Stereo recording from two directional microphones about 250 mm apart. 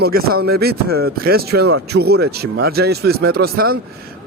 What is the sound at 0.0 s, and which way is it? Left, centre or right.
Speech, right.